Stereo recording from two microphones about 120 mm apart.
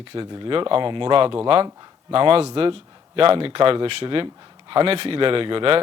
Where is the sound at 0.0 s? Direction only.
45° right (ahead or behind).